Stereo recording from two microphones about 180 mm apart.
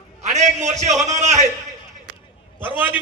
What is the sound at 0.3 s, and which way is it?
A man's voice, 40° right (ahead or behind).